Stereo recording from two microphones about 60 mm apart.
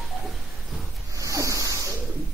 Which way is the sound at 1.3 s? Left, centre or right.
Right.